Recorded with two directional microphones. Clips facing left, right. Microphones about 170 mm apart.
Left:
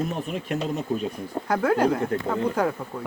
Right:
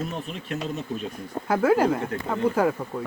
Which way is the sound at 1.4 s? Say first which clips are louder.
Right 1 dB; 5° right (ahead or behind).